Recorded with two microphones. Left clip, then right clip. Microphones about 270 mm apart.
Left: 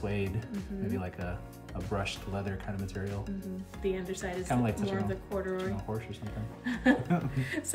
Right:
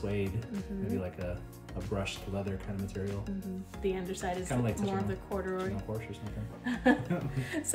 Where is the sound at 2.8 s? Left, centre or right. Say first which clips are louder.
Even; centre.